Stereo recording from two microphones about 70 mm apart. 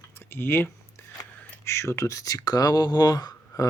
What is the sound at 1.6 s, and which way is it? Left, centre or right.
Speech, left.